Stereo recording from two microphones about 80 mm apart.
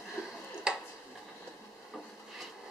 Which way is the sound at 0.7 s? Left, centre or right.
Centre.